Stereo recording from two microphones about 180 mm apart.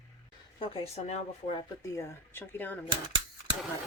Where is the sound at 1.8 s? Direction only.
15° left (ahead or behind).